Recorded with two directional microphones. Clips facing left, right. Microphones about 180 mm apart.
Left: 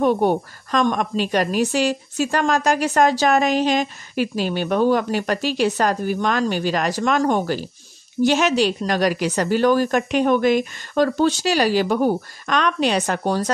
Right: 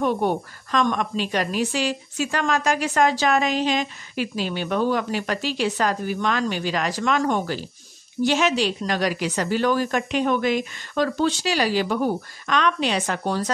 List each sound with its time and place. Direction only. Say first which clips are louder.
0.0 s a woman's voice: left 4 dB; 40° left (ahead or behind)